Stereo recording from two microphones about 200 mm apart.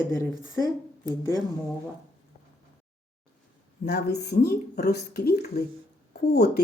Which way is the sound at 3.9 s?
55° left (ahead or behind).